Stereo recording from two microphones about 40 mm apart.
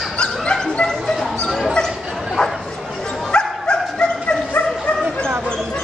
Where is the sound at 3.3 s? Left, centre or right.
Left.